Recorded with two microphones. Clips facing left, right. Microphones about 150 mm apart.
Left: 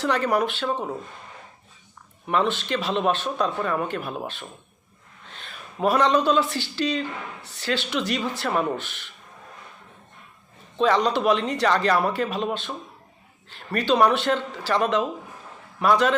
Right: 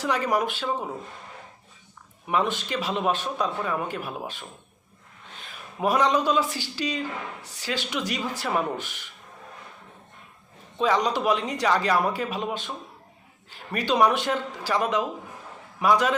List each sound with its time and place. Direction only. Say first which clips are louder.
0.0 s speech: left 2 dB; 10° right (ahead or behind)
2.2 s speech: left 2 dB; 10° right (ahead or behind)
10.8 s speech: left 3 dB; 10° right (ahead or behind)